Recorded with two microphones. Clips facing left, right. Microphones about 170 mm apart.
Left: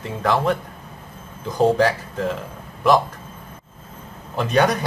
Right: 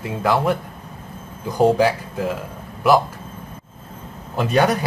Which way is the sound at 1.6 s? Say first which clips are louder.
Right 1 dB; 5° right (ahead or behind).